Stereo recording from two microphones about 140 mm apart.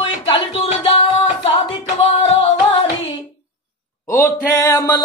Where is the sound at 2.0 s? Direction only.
45° left (ahead or behind).